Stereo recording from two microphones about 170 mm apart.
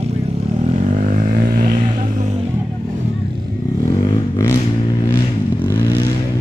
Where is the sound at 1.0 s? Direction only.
55° right (ahead or behind).